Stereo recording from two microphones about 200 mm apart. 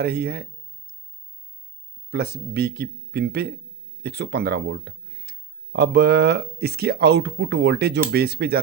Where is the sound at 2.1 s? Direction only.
55° right (ahead or behind).